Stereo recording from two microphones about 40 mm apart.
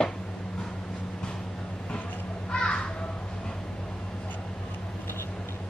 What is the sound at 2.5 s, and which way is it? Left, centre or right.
Crow, left.